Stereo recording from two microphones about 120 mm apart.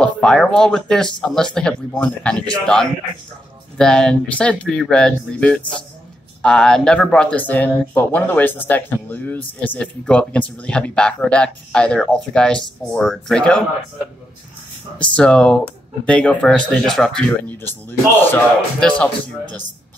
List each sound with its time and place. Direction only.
0.0 s speech: 5° left (ahead or behind)
5.6 s a man's voice: 40° left (ahead or behind)
6.4 s speech: 5° left (ahead or behind)
15.0 s speech: 10° left (ahead or behind)
17.5 s speech: 15° left (ahead or behind)